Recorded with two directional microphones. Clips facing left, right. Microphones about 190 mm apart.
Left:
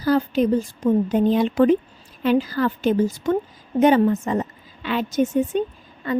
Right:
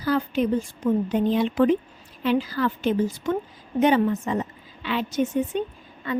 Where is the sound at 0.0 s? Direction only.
40° left (ahead or behind).